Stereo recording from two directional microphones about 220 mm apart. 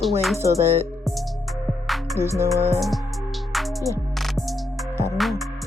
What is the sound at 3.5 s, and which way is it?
Music, centre (ahead or behind).